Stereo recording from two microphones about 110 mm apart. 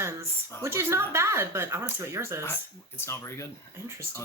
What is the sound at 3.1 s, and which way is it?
Speech, 25° left (ahead or behind).